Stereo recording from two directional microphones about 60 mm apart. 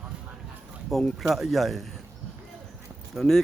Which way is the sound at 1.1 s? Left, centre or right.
Centre.